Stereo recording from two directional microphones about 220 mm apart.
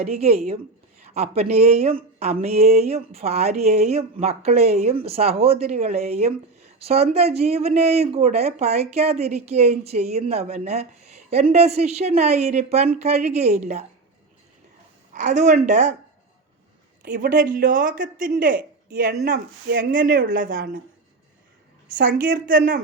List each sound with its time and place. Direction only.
0.0 s a woman's voice: 30° right (ahead or behind)
15.1 s speech: 35° right (ahead or behind)
17.0 s speech: 40° right (ahead or behind)
21.8 s speech: 40° right (ahead or behind)